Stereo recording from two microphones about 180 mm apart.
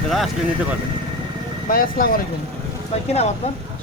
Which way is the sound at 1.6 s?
55° left (ahead or behind).